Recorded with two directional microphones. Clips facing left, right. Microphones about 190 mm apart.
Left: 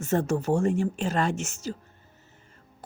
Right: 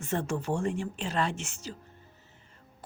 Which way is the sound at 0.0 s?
40° left (ahead or behind).